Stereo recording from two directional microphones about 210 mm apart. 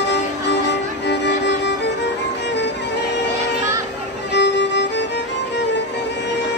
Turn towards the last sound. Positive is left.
turn(degrees=55)  # may be behind; listen again after turning